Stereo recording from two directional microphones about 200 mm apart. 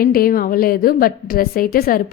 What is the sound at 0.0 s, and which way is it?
A woman's voice, 45° left (ahead or behind).